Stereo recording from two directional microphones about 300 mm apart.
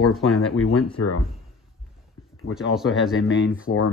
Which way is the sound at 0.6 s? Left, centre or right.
Left.